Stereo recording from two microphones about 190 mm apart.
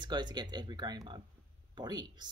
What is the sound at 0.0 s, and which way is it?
Speech, 25° right (ahead or behind).